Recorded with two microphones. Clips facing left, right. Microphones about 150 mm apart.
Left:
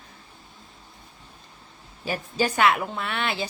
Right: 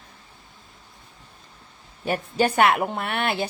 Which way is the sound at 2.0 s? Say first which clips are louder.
Right 3 dB; 60° right (ahead or behind).